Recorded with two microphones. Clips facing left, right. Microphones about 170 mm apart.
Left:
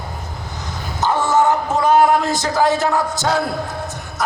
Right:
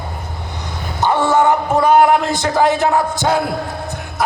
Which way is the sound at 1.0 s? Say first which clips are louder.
Right 2 dB; 60° right (ahead or behind).